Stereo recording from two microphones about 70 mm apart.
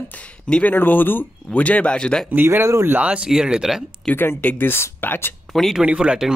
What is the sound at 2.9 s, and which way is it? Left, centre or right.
Speech, centre.